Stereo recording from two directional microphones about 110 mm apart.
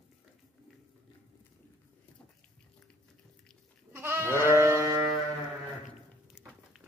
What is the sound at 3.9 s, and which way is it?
Goat, 20° right (ahead or behind).